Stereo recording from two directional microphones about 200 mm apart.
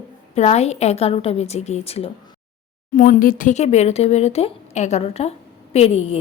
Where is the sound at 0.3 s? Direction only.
35° left (ahead or behind).